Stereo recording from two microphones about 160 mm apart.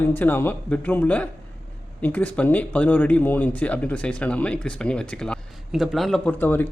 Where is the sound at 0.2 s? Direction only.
10° left (ahead or behind).